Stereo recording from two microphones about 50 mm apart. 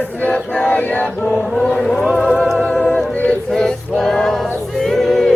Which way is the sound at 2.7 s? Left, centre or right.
Left.